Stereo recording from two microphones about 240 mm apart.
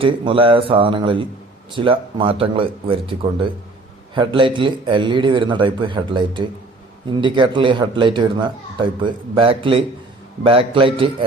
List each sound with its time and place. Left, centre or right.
0.0 s speech: right